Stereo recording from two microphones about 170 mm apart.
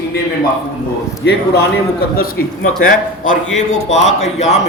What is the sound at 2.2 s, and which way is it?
A man's voice, 55° left (ahead or behind).